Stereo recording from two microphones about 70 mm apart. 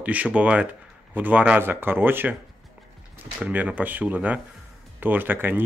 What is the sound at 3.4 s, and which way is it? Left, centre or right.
Speech, right.